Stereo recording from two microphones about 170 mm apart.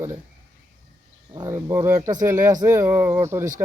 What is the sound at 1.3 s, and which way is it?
Speech, 20° right (ahead or behind).